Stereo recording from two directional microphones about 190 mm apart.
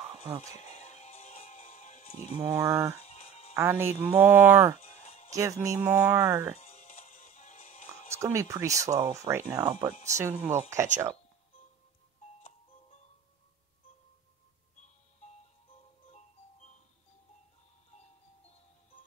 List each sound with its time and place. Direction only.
0.6 s music: 35° left (ahead or behind)
2.4 s speech: 10° right (ahead or behind)
3.0 s music: 35° left (ahead or behind)
3.5 s speech: 10° right (ahead or behind)
4.7 s music: 35° left (ahead or behind)
5.3 s speech: 15° right (ahead or behind)
6.6 s music: 35° left (ahead or behind)
8.2 s speech: 15° right (ahead or behind)